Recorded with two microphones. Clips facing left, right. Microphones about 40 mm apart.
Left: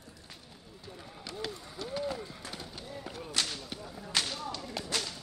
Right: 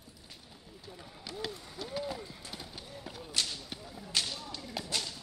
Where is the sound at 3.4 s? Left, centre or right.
Left.